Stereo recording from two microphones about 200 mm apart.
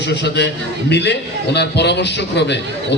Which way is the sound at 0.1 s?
60° left (ahead or behind).